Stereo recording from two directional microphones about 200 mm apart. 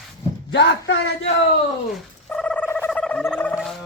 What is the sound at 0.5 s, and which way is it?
Music, 65° left (ahead or behind).